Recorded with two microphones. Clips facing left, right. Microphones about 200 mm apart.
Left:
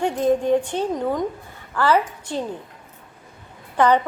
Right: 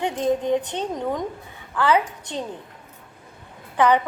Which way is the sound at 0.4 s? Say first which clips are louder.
Left 3 dB; 10° left (ahead or behind).